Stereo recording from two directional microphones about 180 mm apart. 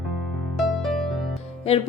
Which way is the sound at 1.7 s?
30° left (ahead or behind).